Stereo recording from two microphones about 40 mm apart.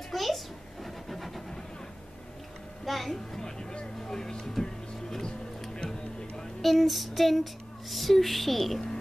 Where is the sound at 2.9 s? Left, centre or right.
Centre.